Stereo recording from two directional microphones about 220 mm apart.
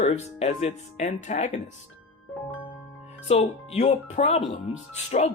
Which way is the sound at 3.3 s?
30° left (ahead or behind).